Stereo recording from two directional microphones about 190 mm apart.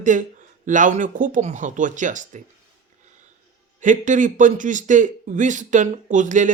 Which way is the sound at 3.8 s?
40° right (ahead or behind).